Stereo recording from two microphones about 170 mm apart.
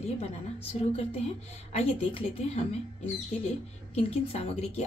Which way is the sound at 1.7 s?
40° left (ahead or behind).